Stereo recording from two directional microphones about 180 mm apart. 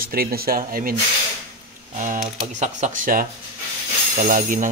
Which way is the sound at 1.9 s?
45° right (ahead or behind).